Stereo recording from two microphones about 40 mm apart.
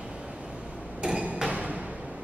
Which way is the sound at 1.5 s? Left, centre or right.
Right.